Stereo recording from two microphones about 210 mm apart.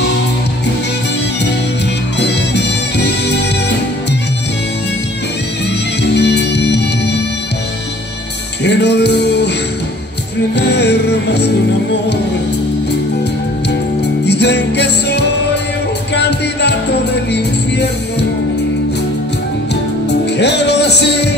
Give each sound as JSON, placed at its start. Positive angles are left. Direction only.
{"t": 2.1, "sound": "music", "side_deg": 55}
{"t": 6.0, "sound": "music", "side_deg": 55}
{"t": 8.6, "sound": "music", "side_deg": 55}
{"t": 10.5, "sound": "music", "side_deg": 55}
{"t": 14.2, "sound": "music", "side_deg": 55}
{"t": 20.3, "sound": "music", "side_deg": 55}